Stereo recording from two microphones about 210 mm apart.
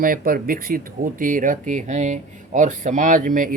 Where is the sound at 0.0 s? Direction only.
40° right (ahead or behind).